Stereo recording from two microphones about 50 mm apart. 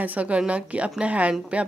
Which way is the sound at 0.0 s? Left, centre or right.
Right.